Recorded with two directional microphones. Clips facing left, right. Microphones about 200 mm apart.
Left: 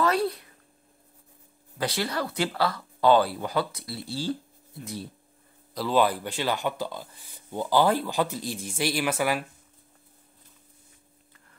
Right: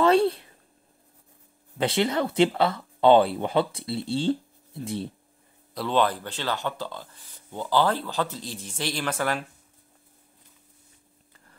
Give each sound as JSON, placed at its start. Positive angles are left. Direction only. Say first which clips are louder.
{"t": 0.0, "sound": "a sound", "louder": "right 5 dB", "side_deg": -25}
{"t": 1.8, "sound": "speech", "louder": "right 5 dB", "side_deg": -25}
{"t": 5.8, "sound": "speech", "louder": "left 1 dB", "side_deg": 5}